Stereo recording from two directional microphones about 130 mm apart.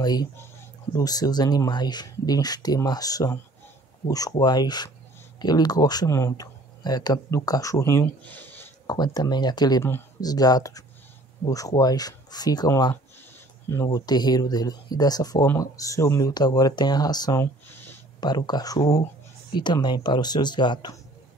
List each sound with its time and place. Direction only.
0.0 s speech: 30° left (ahead or behind); by 8.6 s 15° left (ahead or behind)
8.8 s speech: 30° left (ahead or behind)
13.9 s speech: 30° left (ahead or behind)
17.4 s a sound: 15° left (ahead or behind)
18.2 s speech: 35° left (ahead or behind)